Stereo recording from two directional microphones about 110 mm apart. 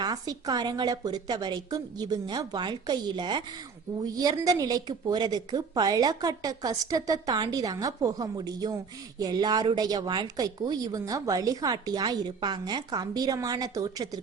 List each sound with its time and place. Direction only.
0.0 s a woman's voice: 35° right (ahead or behind)